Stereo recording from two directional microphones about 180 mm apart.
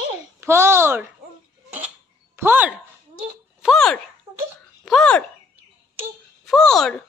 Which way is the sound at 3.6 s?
5° left (ahead or behind).